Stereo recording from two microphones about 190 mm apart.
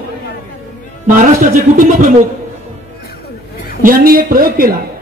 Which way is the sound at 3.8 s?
50° right (ahead or behind).